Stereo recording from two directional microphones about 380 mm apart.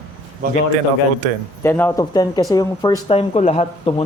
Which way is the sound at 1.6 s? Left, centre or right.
Centre.